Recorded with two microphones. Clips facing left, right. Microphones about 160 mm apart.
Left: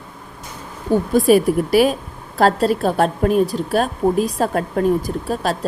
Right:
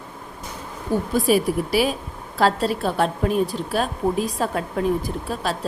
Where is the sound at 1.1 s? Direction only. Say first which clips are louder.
Left 6 dB; 50° left (ahead or behind).